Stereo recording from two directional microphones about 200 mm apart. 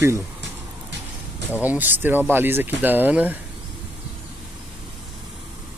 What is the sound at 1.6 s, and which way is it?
Speech, 10° right (ahead or behind).